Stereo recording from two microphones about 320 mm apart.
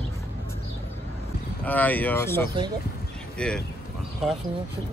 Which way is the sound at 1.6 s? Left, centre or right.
Centre.